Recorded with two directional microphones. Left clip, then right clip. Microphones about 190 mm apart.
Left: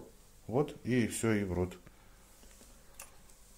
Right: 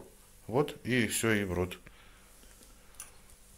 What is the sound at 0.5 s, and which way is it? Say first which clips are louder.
Speech: right 3 dB; 5° left (ahead or behind).